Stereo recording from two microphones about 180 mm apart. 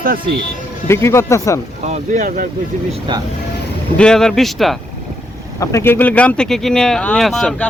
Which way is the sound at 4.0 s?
5° left (ahead or behind).